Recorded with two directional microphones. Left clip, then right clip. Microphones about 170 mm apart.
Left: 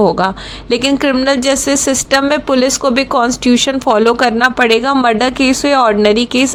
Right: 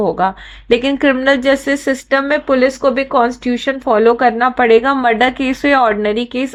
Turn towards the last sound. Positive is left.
turn(degrees=35)  # may be behind; listen again after turning